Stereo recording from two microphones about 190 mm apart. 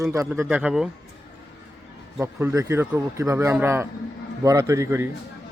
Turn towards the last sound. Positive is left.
turn(degrees=-15)  # may be behind; listen again after turning